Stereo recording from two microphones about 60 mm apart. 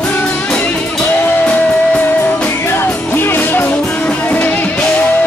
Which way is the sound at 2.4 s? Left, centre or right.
Left.